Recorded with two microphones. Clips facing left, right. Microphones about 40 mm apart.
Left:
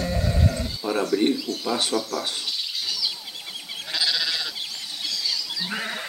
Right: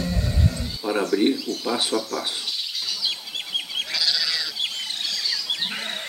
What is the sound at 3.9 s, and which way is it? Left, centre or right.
Goat, left.